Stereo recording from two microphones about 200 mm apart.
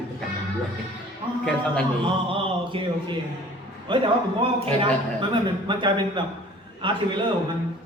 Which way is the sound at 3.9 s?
25° right (ahead or behind).